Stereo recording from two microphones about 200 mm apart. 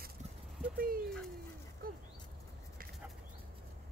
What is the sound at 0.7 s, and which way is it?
Dog, 45° right (ahead or behind).